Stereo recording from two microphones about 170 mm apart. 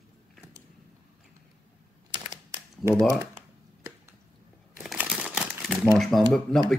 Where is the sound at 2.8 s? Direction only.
15° right (ahead or behind).